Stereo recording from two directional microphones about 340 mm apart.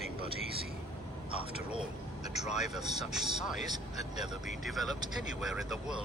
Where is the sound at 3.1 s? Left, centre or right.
Centre.